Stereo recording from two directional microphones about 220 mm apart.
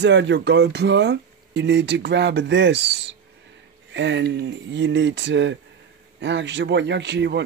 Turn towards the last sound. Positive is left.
turn(degrees=-50)  # may be behind; listen again after turning